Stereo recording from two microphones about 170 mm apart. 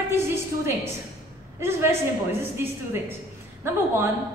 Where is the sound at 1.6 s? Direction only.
15° right (ahead or behind).